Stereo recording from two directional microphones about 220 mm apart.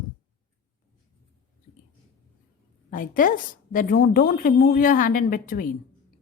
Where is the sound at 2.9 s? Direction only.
40° left (ahead or behind).